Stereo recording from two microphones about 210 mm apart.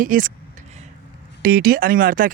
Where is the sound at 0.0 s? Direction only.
40° right (ahead or behind).